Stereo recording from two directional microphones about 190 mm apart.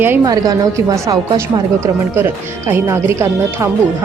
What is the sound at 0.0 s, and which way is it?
A woman's voice, 15° right (ahead or behind).